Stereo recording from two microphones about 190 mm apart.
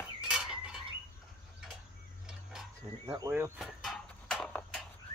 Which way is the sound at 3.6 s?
Centre (ahead or behind).